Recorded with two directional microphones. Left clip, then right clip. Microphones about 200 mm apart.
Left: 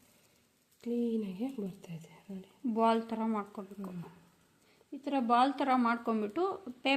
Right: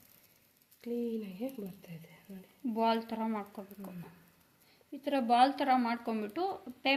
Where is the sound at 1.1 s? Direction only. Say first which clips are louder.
Left 2 dB; 35° left (ahead or behind).